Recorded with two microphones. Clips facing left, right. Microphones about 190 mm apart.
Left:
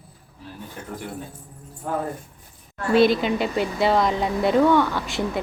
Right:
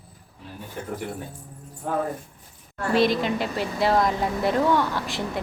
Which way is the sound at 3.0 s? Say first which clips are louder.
Left 4 dB; centre (ahead or behind).